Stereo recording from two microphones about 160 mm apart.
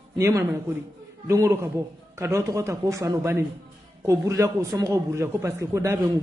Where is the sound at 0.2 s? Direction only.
15° right (ahead or behind).